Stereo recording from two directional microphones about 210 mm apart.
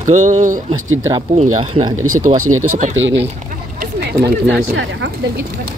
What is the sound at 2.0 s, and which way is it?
Speech, 90° right.